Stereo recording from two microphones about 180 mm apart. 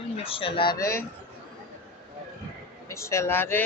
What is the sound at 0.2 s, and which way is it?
Speech, 30° left (ahead or behind).